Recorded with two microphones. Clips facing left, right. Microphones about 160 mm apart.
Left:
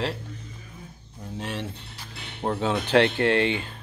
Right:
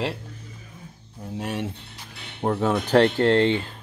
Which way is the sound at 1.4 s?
10° right (ahead or behind).